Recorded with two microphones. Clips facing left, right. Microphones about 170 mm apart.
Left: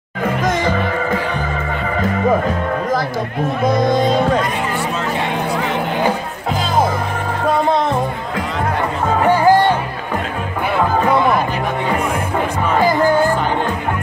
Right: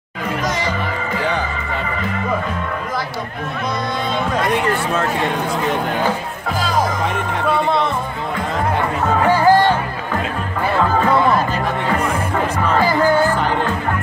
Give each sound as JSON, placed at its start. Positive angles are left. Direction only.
{"t": 3.6, "sound": "speech", "side_deg": 40}
{"t": 9.2, "sound": "music", "side_deg": 15}
{"t": 10.8, "sound": "music", "side_deg": 15}
{"t": 12.7, "sound": "music", "side_deg": 15}